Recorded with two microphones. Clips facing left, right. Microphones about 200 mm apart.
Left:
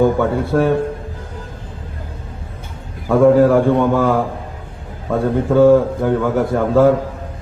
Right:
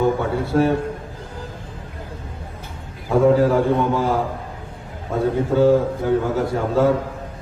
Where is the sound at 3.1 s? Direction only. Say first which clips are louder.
Left 5 dB; 55° left (ahead or behind).